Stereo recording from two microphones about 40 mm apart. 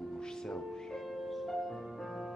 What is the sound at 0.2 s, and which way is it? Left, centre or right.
Music, centre.